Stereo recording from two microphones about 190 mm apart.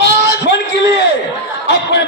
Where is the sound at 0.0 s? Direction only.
65° left (ahead or behind).